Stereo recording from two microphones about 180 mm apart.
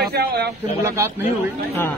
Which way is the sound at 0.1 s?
65° right (ahead or behind).